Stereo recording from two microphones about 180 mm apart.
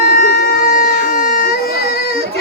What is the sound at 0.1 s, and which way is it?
Baby cry, 50° left (ahead or behind).